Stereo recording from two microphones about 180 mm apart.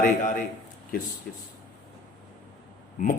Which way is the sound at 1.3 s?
55° left (ahead or behind).